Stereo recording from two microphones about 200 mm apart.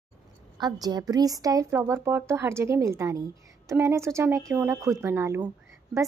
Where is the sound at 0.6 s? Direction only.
20° right (ahead or behind).